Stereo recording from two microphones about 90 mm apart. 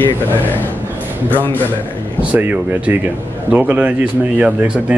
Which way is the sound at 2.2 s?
15° right (ahead or behind).